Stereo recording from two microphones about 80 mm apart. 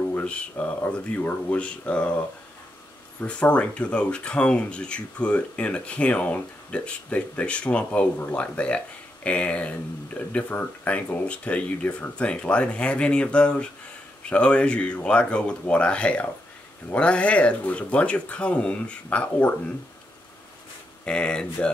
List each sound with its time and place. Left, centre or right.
0.1 s speech: centre
3.2 s speech: centre
21.0 s speech: centre